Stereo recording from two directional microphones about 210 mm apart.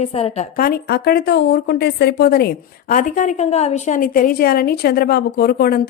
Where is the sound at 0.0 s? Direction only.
30° left (ahead or behind).